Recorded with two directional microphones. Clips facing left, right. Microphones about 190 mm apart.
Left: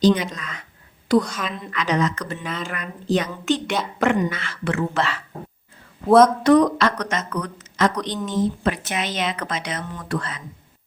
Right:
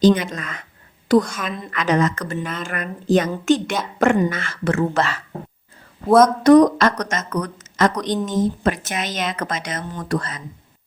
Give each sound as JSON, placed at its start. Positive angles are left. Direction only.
{"t": 0.0, "sound": "a woman's voice", "side_deg": -50}
{"t": 2.4, "sound": "speech", "side_deg": 0}
{"t": 2.6, "sound": "speech", "side_deg": -50}
{"t": 6.1, "sound": "speech", "side_deg": 0}
{"t": 6.4, "sound": "speech", "side_deg": -40}